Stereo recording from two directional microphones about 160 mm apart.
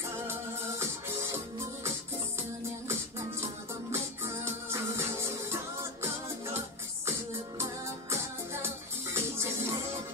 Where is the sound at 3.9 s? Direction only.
15° right (ahead or behind).